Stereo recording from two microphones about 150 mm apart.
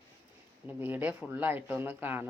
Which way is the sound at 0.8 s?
15° right (ahead or behind).